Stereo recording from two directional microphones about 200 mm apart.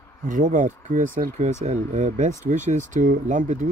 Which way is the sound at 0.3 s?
40° right (ahead or behind).